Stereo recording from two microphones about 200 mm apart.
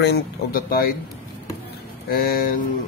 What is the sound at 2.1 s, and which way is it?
Speech, 50° left (ahead or behind).